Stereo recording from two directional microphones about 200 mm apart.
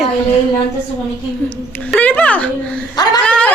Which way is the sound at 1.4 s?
5° left (ahead or behind).